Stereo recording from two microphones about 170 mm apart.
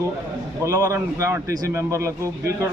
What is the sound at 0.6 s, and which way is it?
A man's voice, 20° right (ahead or behind).